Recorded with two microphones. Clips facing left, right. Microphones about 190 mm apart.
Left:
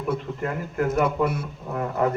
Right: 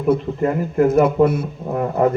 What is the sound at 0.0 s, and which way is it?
Speech, 30° right (ahead or behind).